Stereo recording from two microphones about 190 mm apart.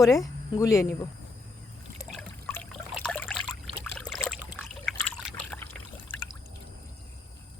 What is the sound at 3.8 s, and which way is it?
Boat, 5° left (ahead or behind).